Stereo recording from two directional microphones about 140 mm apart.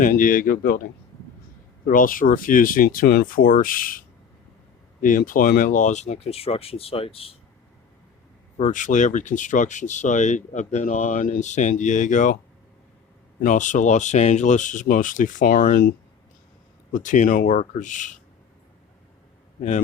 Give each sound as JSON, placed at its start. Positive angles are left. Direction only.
{"t": 0.0, "sound": "speech", "side_deg": 75}
{"t": 1.9, "sound": "speech", "side_deg": 75}
{"t": 4.9, "sound": "speech", "side_deg": 70}
{"t": 8.5, "sound": "speech", "side_deg": 60}
{"t": 13.4, "sound": "speech", "side_deg": 65}
{"t": 16.9, "sound": "speech", "side_deg": 65}